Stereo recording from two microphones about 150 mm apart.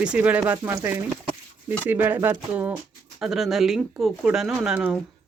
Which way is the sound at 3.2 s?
Centre (ahead or behind).